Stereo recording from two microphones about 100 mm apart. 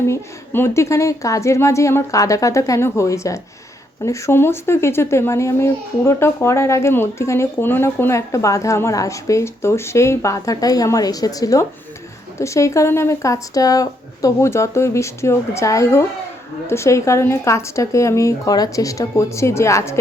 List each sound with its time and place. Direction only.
0.0 s a woman's voice: 25° left (ahead or behind)